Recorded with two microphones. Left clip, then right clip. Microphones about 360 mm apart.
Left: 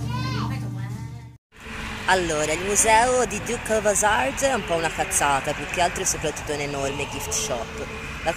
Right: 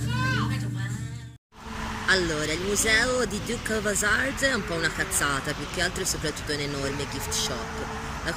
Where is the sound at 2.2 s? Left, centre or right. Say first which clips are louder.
Left 4 dB; left.